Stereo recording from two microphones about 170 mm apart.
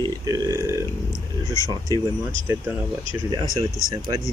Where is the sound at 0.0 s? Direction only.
20° right (ahead or behind).